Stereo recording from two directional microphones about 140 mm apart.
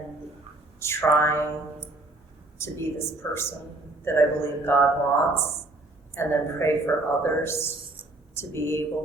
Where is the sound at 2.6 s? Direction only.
20° left (ahead or behind).